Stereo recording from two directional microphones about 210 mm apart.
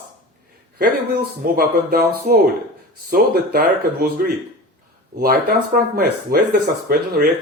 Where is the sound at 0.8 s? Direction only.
45° right (ahead or behind).